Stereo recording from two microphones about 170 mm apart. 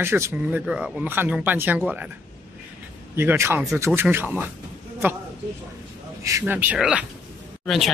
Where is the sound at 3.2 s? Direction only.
15° right (ahead or behind).